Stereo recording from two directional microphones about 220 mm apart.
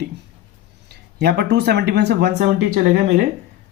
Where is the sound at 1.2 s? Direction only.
50° right (ahead or behind).